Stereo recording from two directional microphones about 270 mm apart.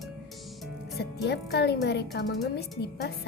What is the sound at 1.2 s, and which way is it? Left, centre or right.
Speech, left.